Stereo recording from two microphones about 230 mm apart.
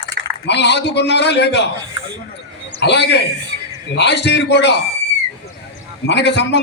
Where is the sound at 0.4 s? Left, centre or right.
Left.